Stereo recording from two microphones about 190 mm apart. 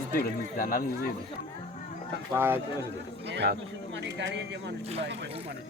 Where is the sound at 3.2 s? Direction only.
65° right (ahead or behind).